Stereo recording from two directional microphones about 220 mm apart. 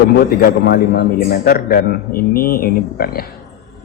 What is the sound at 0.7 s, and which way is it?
A man's voice, 45° left (ahead or behind).